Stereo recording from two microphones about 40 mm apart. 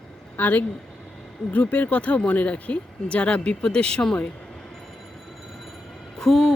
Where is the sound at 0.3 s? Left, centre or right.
Left.